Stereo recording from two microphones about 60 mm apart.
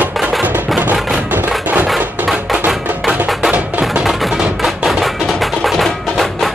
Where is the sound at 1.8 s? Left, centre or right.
Centre.